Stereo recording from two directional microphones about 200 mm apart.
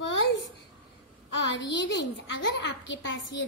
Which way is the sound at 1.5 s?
65° left (ahead or behind).